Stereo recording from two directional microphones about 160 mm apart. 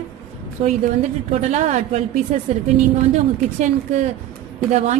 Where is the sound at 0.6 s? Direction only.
45° right (ahead or behind).